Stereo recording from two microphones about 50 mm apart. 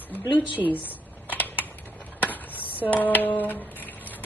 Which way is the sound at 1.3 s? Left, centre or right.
Left.